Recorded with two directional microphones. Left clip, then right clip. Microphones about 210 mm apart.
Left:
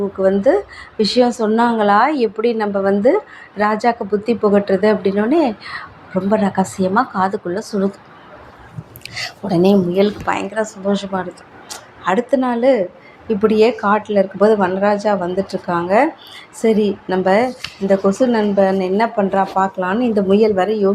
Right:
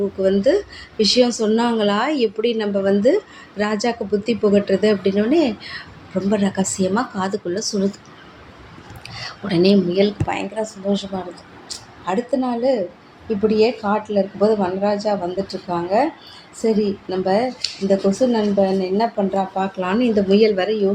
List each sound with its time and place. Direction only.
0.2 s a woman's voice: 5° left (ahead or behind)
9.0 s whispering: 25° left (ahead or behind)
9.5 s speech: 15° left (ahead or behind); by 20.1 s centre (ahead or behind)
20.1 s speech: 15° left (ahead or behind)